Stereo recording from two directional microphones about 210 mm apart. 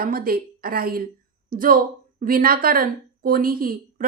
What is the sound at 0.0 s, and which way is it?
A woman's voice, 45° right (ahead or behind).